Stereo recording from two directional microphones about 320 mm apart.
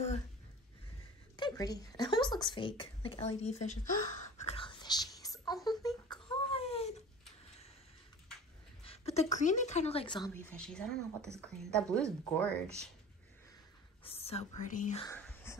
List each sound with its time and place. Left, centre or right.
1.3 s speech: centre
4.4 s whispering: centre
8.8 s a woman's voice: centre
14.0 s speech: centre
15.0 s whispering: centre